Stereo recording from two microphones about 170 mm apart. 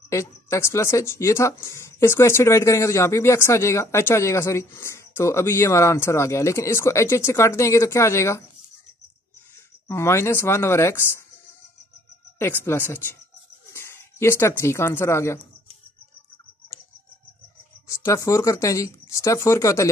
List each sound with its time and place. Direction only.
0.1 s speech: 15° left (ahead or behind)
9.8 s speech: 15° left (ahead or behind)
12.4 s speech: 15° left (ahead or behind)
17.8 s speech: 15° left (ahead or behind)